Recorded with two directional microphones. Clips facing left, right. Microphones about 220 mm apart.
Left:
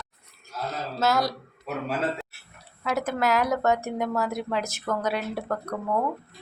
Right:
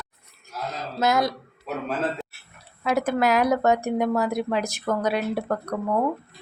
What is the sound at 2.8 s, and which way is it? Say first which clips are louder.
A woman's voice: right 4 dB; 15° right (ahead or behind).